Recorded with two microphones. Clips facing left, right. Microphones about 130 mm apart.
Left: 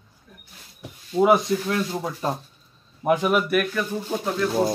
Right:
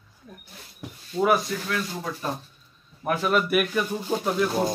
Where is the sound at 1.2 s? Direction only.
25° left (ahead or behind).